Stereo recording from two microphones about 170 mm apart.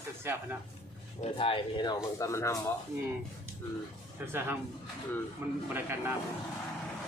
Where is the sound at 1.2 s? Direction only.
30° left (ahead or behind).